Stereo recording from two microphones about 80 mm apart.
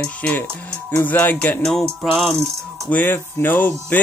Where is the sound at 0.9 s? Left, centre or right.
Left.